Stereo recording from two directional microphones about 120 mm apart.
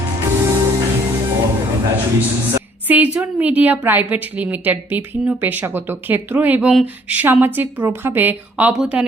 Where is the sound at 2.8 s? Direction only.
15° right (ahead or behind).